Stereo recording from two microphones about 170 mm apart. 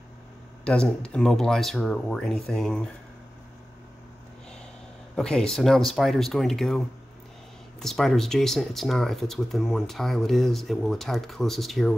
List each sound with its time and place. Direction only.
0.7 s speech: 5° left (ahead or behind)
5.1 s speech: 5° left (ahead or behind)
7.8 s speech: centre (ahead or behind)